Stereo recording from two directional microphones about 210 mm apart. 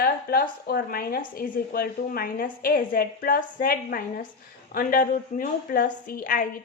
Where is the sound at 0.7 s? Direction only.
45° left (ahead or behind).